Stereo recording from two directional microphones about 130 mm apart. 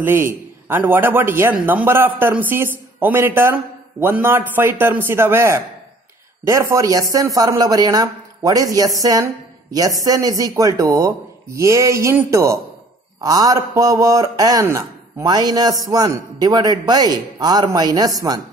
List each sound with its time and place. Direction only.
0.0 s a man's voice: 15° right (ahead or behind)